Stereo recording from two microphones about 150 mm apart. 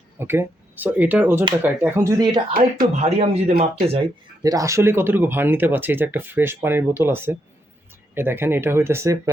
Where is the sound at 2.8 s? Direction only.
50° right (ahead or behind).